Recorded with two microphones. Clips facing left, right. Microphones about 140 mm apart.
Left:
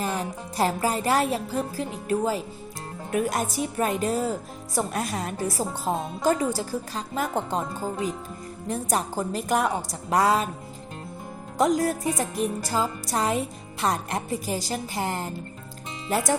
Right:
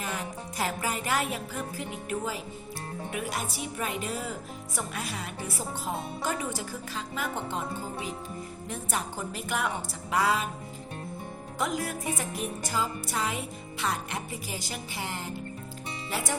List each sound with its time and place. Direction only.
0.0 s a woman's voice: 35° left (ahead or behind)
11.5 s a woman's voice: 40° left (ahead or behind)